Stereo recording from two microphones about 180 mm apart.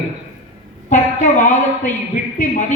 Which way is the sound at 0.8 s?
40° left (ahead or behind).